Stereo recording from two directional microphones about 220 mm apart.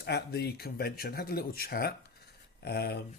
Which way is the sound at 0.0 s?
45° left (ahead or behind).